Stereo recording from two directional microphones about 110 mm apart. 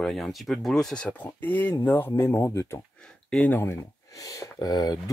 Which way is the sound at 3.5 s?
25° left (ahead or behind).